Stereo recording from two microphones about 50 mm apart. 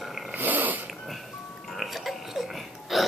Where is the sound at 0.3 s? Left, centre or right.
Right.